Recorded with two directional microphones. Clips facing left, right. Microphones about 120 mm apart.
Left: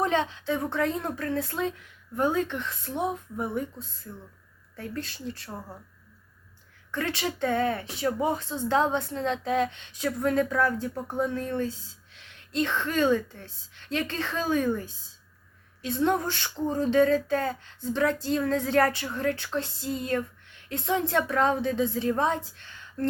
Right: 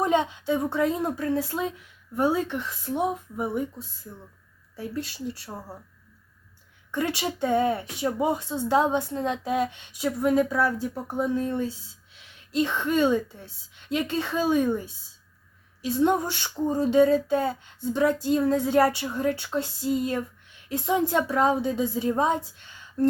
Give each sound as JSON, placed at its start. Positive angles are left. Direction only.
{"t": 0.0, "sound": "speech", "side_deg": -15}
{"t": 6.9, "sound": "speech", "side_deg": -15}
{"t": 14.4, "sound": "a woman's voice", "side_deg": -25}
{"t": 15.8, "sound": "a woman's voice", "side_deg": -10}